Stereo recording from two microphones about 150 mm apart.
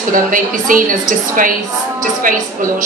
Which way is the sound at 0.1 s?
65° right (ahead or behind).